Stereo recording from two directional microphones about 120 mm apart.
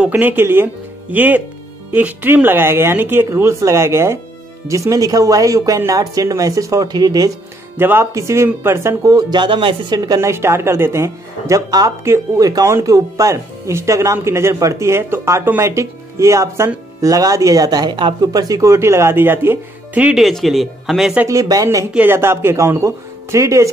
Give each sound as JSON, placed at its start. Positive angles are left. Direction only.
{"t": 0.1, "sound": "speech", "side_deg": -15}
{"t": 7.7, "sound": "speech", "side_deg": -20}
{"t": 20.2, "sound": "speech", "side_deg": 0}
{"t": 21.3, "sound": "speech", "side_deg": -30}
{"t": 21.9, "sound": "speech", "side_deg": -15}